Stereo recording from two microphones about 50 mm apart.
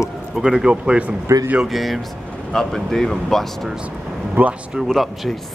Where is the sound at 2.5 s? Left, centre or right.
Centre.